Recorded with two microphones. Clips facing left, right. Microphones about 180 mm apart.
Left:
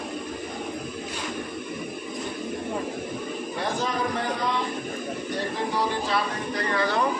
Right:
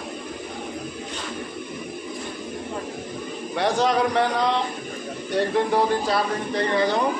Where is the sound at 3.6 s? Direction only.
75° right (ahead or behind).